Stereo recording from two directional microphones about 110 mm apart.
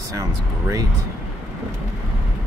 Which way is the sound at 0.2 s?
30° right (ahead or behind).